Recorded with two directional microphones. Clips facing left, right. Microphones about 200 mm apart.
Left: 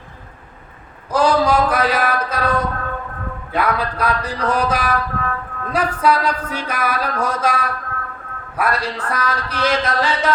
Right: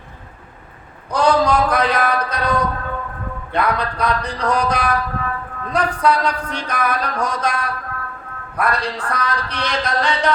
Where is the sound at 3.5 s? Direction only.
5° left (ahead or behind).